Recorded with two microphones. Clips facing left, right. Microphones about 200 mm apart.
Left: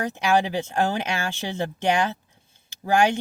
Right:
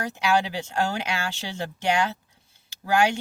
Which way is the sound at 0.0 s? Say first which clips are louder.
Left 2 dB; 15° left (ahead or behind).